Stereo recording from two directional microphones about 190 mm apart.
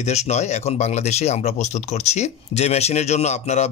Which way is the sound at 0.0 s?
35° left (ahead or behind).